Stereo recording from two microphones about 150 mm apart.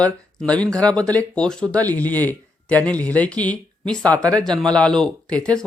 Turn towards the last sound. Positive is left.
turn(degrees=5)  # may be behind; listen again after turning